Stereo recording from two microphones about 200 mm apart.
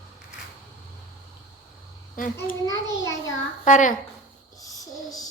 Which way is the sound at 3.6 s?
40° left (ahead or behind).